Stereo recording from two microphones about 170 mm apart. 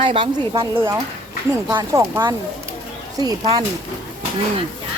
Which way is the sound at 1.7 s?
15° right (ahead or behind).